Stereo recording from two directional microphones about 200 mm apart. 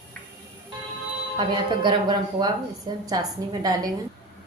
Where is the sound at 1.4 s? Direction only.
25° right (ahead or behind).